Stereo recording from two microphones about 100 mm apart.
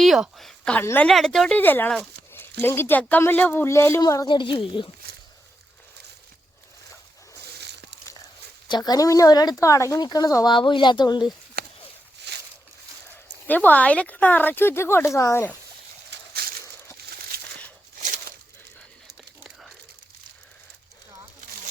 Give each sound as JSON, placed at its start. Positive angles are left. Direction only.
{"t": 0.0, "sound": "a sound", "side_deg": 0}
{"t": 0.8, "sound": "speech", "side_deg": 20}
{"t": 1.0, "sound": "a woman's voice", "side_deg": 5}
{"t": 1.5, "sound": "speech", "side_deg": 20}
{"t": 4.0, "sound": "a woman's voice", "side_deg": 35}
{"t": 4.3, "sound": "speech", "side_deg": 55}
{"t": 8.6, "sound": "a woman's voice", "side_deg": 45}
{"t": 10.5, "sound": "speech", "side_deg": 55}
{"t": 13.5, "sound": "speech", "side_deg": 15}